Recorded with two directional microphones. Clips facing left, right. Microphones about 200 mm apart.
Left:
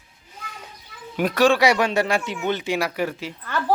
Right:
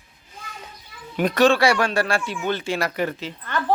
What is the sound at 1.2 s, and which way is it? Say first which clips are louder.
Speech: even; 5° left (ahead or behind).